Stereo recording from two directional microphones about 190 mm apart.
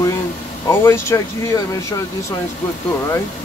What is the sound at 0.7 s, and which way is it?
Speech, 15° left (ahead or behind).